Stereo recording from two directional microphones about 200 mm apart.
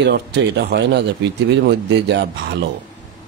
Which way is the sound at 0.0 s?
60° right (ahead or behind).